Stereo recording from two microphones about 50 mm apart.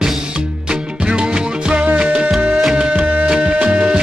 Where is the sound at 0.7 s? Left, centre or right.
Centre.